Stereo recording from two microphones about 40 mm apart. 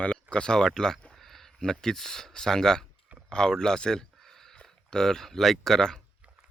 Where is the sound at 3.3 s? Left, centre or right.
Centre.